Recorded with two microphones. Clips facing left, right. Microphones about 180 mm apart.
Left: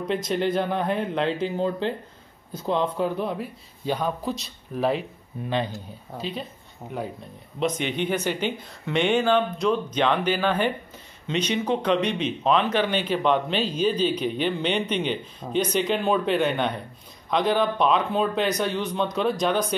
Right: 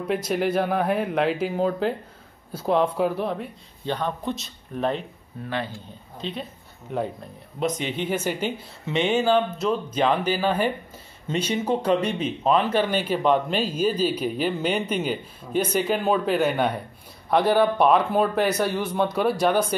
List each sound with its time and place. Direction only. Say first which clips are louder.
0.0 s a man's voice: right 1 dB; 10° right (ahead or behind)
5.4 s speech: left 3 dB; 20° left (ahead or behind)
6.8 s speech: right 3 dB; 60° left (ahead or behind)
7.6 s speech: left 1 dB; centre (ahead or behind)